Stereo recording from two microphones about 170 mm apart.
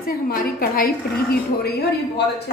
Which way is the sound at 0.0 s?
60° left (ahead or behind).